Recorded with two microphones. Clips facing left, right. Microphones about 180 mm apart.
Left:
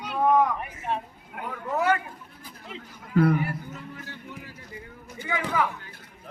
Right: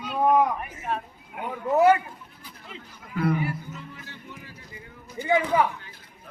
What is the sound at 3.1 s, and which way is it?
Speech, 50° left (ahead or behind).